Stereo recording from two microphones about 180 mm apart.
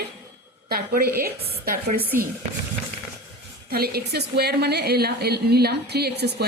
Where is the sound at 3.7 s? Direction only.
60° right (ahead or behind).